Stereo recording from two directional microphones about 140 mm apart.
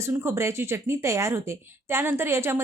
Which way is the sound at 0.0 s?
20° right (ahead or behind).